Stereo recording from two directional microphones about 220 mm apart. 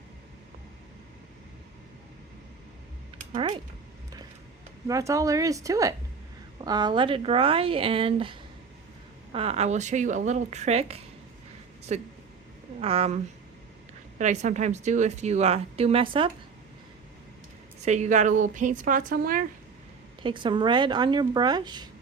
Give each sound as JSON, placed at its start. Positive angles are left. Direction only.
{"t": 3.3, "sound": "speech", "side_deg": -20}
{"t": 4.9, "sound": "speech", "side_deg": -15}
{"t": 14.2, "sound": "speech", "side_deg": -35}
{"t": 17.7, "sound": "speech", "side_deg": -30}
{"t": 20.2, "sound": "speech", "side_deg": -20}